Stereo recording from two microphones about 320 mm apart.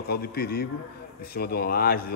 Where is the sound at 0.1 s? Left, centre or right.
Left.